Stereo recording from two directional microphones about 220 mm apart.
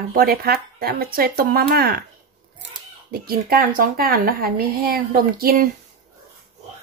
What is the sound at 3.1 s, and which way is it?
A woman's voice, 45° right (ahead or behind).